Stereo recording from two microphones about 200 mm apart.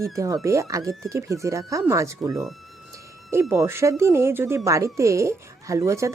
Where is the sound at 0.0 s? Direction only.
15° right (ahead or behind).